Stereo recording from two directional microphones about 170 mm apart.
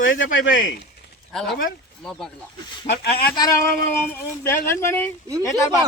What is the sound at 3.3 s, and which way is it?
Speech, 20° left (ahead or behind).